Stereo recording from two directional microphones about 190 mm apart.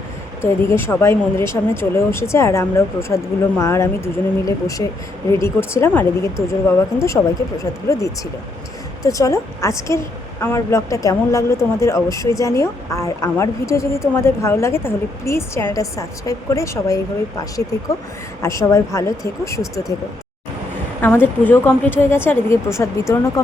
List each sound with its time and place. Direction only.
0.4 s speech: 15° left (ahead or behind)
21.0 s speech: 10° left (ahead or behind)